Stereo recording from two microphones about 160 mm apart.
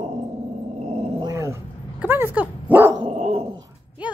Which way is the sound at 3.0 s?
40° right (ahead or behind).